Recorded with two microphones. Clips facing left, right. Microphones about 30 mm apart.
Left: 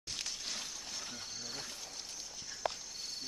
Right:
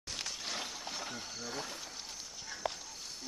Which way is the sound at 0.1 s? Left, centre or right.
Centre.